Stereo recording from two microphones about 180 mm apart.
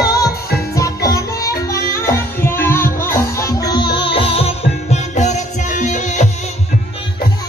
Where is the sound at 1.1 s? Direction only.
20° left (ahead or behind); by 6.3 s 45° left (ahead or behind).